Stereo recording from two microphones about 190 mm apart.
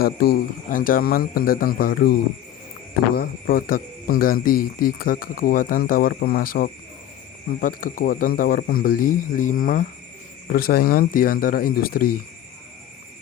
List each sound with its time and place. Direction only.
0.0 s speech: 55° left (ahead or behind)
3.2 s speech: 50° left (ahead or behind)